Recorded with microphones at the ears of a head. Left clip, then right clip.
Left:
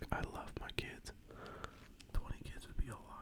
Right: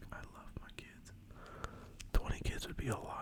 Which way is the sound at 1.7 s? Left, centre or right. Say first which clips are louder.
Right 9 dB; right.